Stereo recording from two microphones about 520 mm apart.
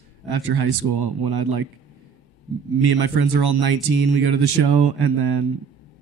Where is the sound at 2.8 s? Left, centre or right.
Right.